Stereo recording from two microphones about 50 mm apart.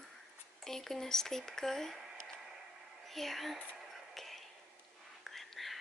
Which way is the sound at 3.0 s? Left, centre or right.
Centre.